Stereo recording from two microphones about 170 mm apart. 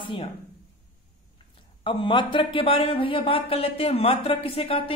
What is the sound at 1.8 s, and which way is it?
Speech, 30° left (ahead or behind).